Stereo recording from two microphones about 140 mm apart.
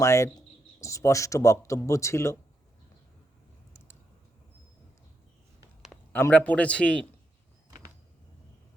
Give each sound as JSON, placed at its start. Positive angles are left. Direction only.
{"t": 0.0, "sound": "speech", "side_deg": 20}
{"t": 6.1, "sound": "a man's voice", "side_deg": 15}